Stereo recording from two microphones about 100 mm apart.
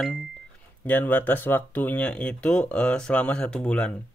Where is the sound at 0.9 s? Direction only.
15° left (ahead or behind).